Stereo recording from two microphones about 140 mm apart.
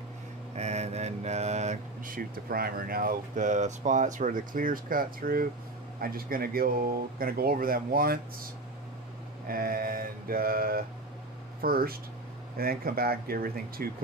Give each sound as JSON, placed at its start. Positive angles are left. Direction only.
{"t": 0.6, "sound": "mantra", "side_deg": -50}
{"t": 2.0, "sound": "speech", "side_deg": -90}
{"t": 9.5, "sound": "speech", "side_deg": -90}